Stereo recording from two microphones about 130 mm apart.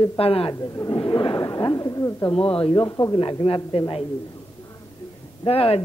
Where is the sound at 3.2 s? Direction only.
40° left (ahead or behind).